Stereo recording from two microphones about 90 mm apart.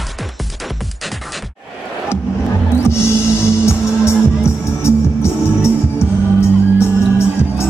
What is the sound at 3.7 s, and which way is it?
Music, 30° left (ahead or behind).